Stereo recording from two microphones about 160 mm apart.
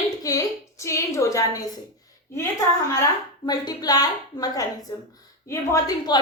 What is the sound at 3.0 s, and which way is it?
A woman's voice, 25° left (ahead or behind).